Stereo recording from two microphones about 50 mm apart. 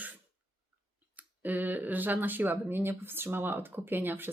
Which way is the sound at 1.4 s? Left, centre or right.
Right.